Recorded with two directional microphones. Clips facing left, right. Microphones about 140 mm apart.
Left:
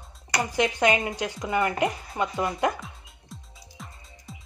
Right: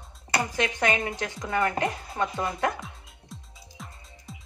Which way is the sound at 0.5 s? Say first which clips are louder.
Left 5 dB; 15° left (ahead or behind).